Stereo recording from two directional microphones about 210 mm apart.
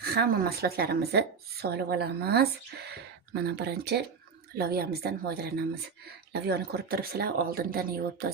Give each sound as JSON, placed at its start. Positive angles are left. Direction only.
{"t": 0.0, "sound": "speech", "side_deg": -45}